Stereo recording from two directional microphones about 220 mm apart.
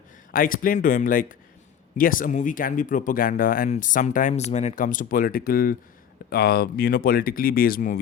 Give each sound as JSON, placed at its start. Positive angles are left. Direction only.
{"t": 0.3, "sound": "speech", "side_deg": 40}